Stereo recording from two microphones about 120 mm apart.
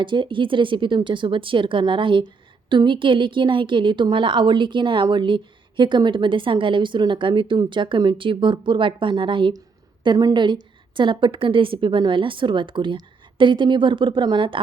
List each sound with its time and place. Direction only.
0.0 s a woman's voice: 45° right (ahead or behind)